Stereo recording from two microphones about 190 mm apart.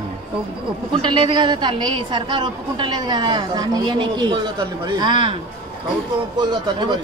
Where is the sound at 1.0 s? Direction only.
25° right (ahead or behind).